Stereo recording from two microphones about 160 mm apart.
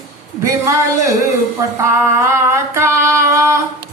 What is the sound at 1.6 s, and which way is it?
Female singing, 20° right (ahead or behind).